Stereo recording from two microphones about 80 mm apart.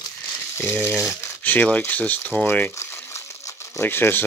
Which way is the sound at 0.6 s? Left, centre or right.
Left.